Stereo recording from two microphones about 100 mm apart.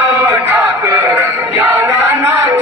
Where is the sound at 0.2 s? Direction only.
20° right (ahead or behind).